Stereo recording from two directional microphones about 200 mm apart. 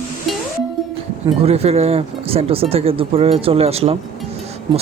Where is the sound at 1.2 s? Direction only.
30° right (ahead or behind).